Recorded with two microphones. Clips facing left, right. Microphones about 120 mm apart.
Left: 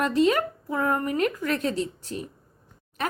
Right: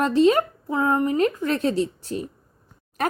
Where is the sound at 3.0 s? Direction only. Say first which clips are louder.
Right 5 dB; 45° right (ahead or behind).